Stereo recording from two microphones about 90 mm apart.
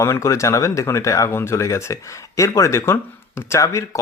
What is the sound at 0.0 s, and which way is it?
Speech, 30° left (ahead or behind).